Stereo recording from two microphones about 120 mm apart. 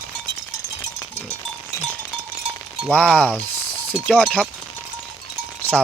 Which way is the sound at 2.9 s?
10° left (ahead or behind).